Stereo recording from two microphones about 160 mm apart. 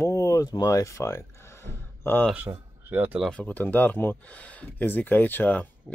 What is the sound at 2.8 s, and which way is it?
Speech, 10° right (ahead or behind).